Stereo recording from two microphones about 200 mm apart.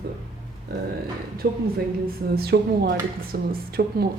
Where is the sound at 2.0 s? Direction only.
50° right (ahead or behind).